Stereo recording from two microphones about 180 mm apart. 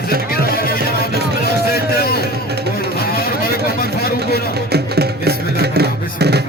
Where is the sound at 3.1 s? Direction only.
55° left (ahead or behind).